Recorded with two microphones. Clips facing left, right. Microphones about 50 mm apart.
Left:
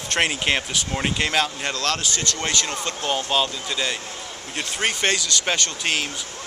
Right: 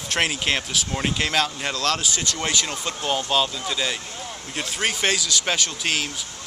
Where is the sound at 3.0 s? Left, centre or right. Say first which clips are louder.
Even; centre.